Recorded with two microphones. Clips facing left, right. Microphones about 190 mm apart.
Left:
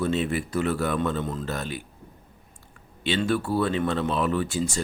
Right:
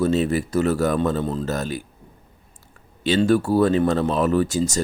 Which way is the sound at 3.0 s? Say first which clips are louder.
Right 7 dB; 40° right (ahead or behind).